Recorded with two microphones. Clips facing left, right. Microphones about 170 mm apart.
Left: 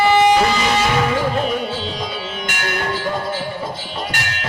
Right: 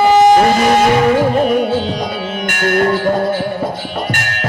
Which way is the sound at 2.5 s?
50° right (ahead or behind).